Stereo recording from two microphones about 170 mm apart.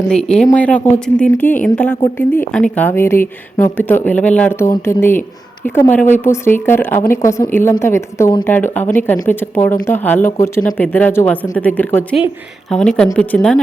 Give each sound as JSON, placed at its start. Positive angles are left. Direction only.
{"t": 0.1, "sound": "a woman's voice", "side_deg": 5}